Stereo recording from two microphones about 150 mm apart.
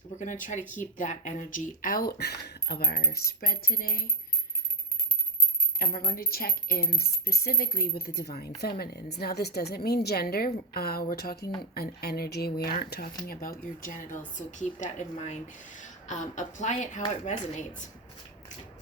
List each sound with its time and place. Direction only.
0.2 s speech: 60° left (ahead or behind); by 2.8 s 90° left
2.9 s coin: 80° left
6.1 s a woman's voice: 80° left; by 17.0 s 55° left (ahead or behind)